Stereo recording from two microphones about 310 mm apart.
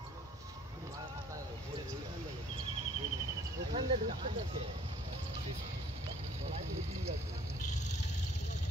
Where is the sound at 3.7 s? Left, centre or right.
Centre.